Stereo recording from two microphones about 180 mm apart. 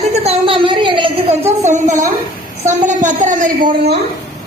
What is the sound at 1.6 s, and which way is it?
A man's voice, 40° right (ahead or behind).